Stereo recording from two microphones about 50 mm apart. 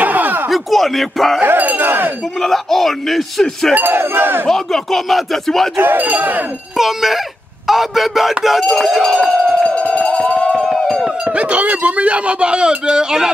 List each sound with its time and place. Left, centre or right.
0.0 s a sound: right
0.5 s speech: centre
1.4 s chink: right
2.4 s speech: centre
3.7 s chink: right
4.5 s speech: centre
5.8 s speech: right
6.8 s speech: centre
9.3 s crowd: centre
9.7 s a sound: left
10.5 s a sound: centre
11.2 s speech: right